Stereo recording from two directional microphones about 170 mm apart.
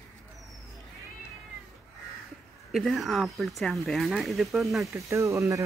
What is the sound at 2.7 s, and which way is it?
Speech, centre (ahead or behind).